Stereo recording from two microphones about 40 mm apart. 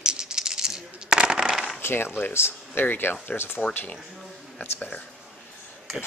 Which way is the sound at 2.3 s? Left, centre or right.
Left.